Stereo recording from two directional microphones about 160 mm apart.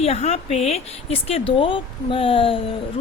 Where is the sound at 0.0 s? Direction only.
40° left (ahead or behind).